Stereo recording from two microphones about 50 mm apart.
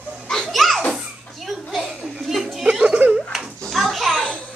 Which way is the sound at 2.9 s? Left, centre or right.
Right.